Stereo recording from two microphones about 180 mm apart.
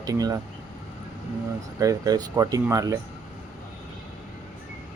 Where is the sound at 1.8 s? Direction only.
20° right (ahead or behind).